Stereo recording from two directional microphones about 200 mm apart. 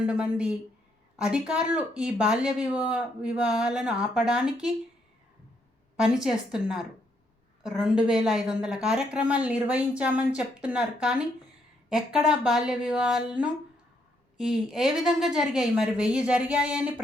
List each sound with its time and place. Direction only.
0.0 s speech: 5° right (ahead or behind)
6.0 s speech: 5° right (ahead or behind)